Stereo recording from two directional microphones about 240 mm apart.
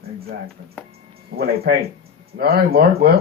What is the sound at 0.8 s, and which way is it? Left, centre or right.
Music, centre.